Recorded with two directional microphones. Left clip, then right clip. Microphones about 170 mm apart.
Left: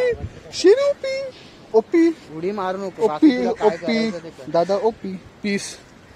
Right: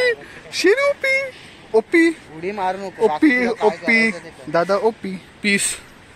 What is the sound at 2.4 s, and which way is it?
Speech, 70° left (ahead or behind).